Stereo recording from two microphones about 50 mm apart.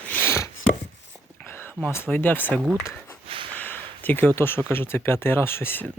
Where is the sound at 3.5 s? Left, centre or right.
Left.